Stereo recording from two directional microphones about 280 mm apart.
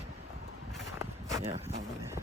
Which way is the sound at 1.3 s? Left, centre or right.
Centre.